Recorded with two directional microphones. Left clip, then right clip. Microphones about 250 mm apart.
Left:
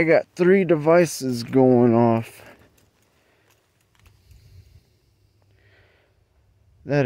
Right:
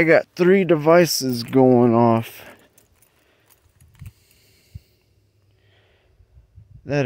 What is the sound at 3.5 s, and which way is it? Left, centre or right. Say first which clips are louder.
Keys jangling: right 2 dB; centre.